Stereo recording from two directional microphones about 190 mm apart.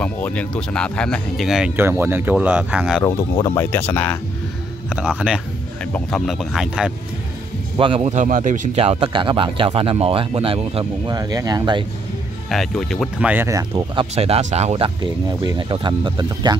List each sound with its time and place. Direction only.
0.0 s speech: 5° left (ahead or behind)
3.0 s speech: 15° left (ahead or behind)
4.8 s speech: 5° right (ahead or behind)
7.7 s speech: 25° right (ahead or behind)
8.1 s speech: 40° right (ahead or behind); by 11.8 s 20° right (ahead or behind)
12.4 s speech: centre (ahead or behind)
13.3 s speech: 15° right (ahead or behind)
14.1 s speech: 35° right (ahead or behind)
15.0 s speech: 25° right (ahead or behind)